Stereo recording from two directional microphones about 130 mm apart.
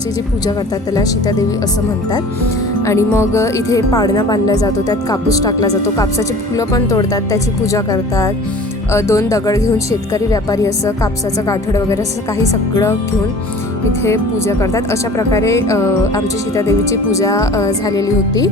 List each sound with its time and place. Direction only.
0.9 s a woman's voice: 30° left (ahead or behind)
2.8 s a woman's voice: 20° left (ahead or behind)
14.0 s a woman's voice: 20° left (ahead or behind)